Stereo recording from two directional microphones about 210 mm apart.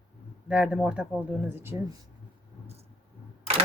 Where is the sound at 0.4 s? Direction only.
5° right (ahead or behind).